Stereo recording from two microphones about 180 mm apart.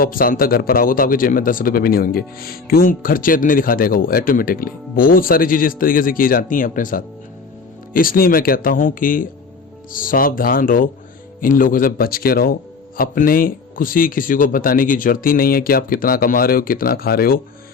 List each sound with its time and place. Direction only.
0.0 s speech: 50° left (ahead or behind)